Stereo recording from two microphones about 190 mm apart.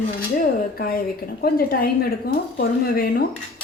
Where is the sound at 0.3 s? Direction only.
50° left (ahead or behind).